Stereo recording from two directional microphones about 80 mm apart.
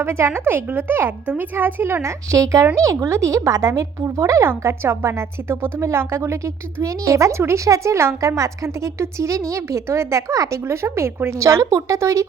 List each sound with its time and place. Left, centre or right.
0.0 s a woman's voice: right
4.4 s a woman's voice: right